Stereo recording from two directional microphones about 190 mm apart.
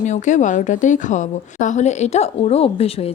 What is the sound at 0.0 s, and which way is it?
A woman's voice, 40° left (ahead or behind).